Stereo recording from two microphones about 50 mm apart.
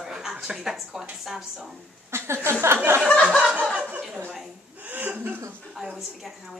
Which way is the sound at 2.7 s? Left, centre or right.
Right.